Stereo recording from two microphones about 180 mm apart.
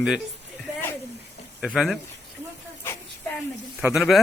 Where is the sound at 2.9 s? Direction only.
15° left (ahead or behind).